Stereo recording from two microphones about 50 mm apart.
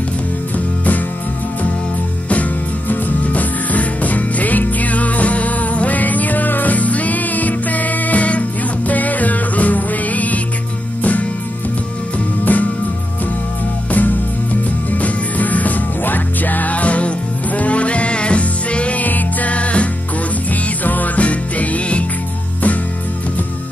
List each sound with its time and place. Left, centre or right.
2.9 s music: left
12.5 s music: left
13.9 s music: left